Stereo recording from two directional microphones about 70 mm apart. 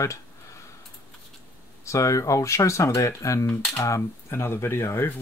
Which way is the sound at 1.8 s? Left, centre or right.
Left.